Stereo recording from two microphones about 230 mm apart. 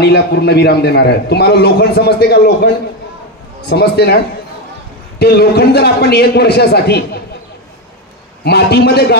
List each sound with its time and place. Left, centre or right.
0.0 s a man's voice: left
5.2 s a man's voice: left
8.5 s a man's voice: left